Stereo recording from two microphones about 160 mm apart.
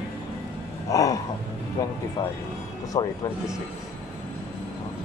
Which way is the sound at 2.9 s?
20° left (ahead or behind).